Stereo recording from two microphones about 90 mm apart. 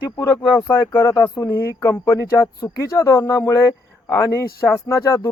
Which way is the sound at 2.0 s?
25° left (ahead or behind).